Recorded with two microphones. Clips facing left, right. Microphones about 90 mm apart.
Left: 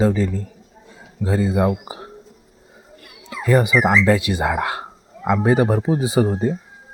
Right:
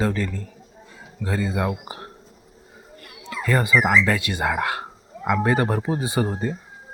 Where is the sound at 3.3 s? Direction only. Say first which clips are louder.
Left 4 dB; 20° left (ahead or behind).